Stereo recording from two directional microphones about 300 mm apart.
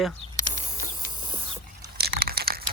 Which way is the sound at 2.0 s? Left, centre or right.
Right.